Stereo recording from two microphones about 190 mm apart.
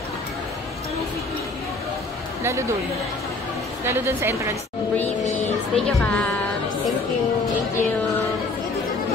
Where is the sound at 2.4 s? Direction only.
15° right (ahead or behind).